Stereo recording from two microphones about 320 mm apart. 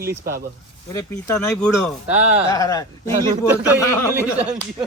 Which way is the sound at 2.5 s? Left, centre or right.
Centre.